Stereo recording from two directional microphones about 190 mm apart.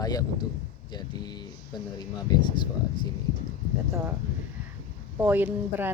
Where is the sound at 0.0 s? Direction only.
20° left (ahead or behind).